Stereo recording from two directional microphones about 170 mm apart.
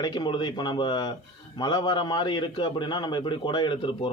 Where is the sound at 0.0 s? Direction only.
25° left (ahead or behind).